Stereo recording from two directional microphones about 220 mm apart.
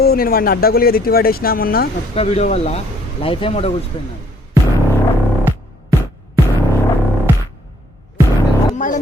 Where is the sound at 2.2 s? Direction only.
25° left (ahead or behind).